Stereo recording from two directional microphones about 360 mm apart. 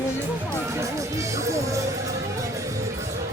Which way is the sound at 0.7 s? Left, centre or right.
Centre.